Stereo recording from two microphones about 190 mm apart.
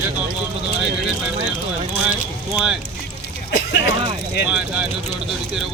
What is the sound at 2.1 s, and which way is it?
Speech, 5° right (ahead or behind).